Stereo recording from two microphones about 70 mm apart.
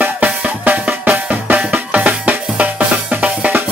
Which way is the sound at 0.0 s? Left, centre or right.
Right.